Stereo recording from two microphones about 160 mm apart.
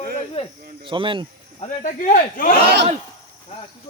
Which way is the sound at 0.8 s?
30° right (ahead or behind).